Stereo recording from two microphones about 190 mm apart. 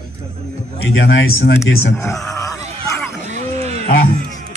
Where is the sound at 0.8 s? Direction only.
80° left.